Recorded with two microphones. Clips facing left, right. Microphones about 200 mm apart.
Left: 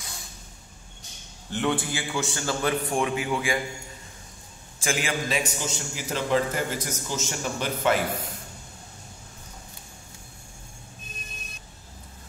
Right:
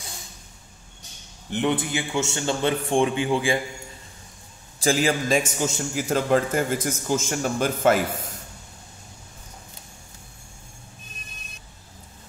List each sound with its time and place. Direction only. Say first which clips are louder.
1.5 s a man's voice: right 3 dB; 20° right (ahead or behind)
4.7 s a man's voice: right 6 dB; 35° right (ahead or behind)